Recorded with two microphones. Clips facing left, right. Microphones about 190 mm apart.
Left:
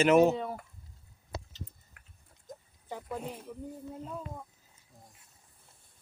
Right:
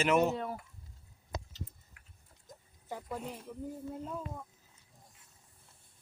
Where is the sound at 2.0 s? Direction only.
55° left (ahead or behind).